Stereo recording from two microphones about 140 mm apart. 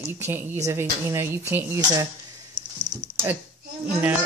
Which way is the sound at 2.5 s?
30° right (ahead or behind).